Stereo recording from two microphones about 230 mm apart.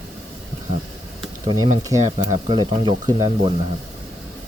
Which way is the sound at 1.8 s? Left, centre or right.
Centre.